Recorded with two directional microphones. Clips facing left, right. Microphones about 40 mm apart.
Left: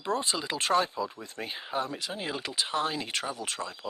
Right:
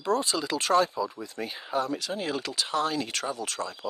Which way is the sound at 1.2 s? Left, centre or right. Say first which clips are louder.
Right 3 dB; left.